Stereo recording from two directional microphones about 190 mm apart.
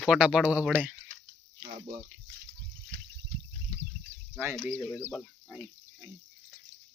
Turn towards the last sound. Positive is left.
turn(degrees=0)  # may be behind; listen again after turning